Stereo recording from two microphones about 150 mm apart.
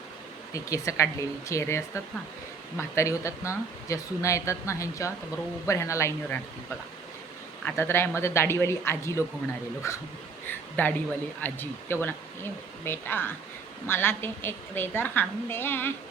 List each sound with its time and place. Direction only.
0.5 s speech: 20° left (ahead or behind)
7.8 s speech: 15° left (ahead or behind)